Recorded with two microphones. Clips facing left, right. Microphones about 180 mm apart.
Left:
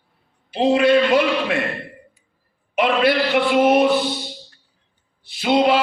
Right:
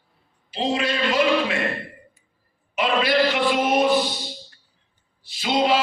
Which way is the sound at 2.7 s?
60° left (ahead or behind).